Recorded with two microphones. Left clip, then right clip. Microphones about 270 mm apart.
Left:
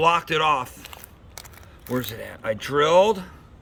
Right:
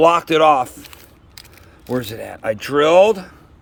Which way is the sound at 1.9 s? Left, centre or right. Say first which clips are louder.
Right 5 dB; centre.